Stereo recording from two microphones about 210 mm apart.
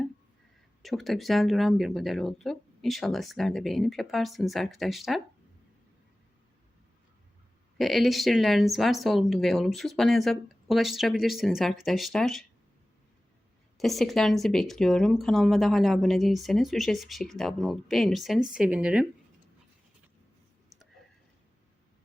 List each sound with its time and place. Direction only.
0.8 s speech: centre (ahead or behind)
7.8 s speech: centre (ahead or behind)
13.7 s speech: centre (ahead or behind)